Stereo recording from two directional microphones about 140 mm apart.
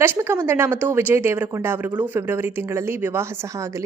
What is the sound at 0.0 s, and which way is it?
A woman's voice, 15° right (ahead or behind).